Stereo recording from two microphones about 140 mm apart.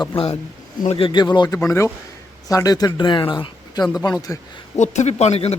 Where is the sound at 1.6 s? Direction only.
20° left (ahead or behind).